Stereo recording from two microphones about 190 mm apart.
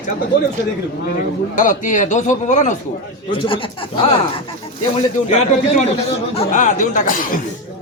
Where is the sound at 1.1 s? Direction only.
40° left (ahead or behind).